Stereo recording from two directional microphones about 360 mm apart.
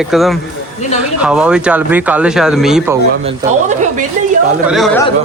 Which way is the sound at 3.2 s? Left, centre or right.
Centre.